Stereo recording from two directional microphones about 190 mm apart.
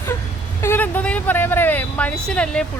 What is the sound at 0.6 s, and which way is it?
Speech, 10° left (ahead or behind).